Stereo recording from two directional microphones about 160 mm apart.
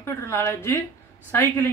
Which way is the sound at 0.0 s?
15° left (ahead or behind).